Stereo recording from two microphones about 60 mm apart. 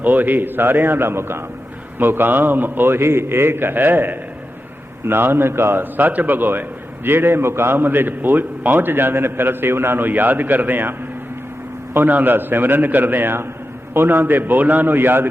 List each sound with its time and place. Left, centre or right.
0.0 s a man's voice: right
11.9 s a man's voice: right